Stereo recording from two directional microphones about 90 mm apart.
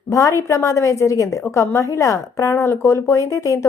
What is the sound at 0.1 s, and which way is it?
A woman's voice, 40° left (ahead or behind).